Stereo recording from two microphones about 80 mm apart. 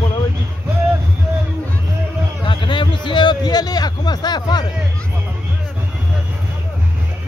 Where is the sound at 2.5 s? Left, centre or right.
Left.